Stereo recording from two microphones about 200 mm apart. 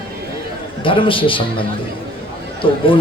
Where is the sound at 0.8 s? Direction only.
25° left (ahead or behind).